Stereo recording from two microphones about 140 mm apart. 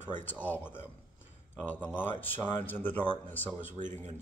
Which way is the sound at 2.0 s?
15° left (ahead or behind).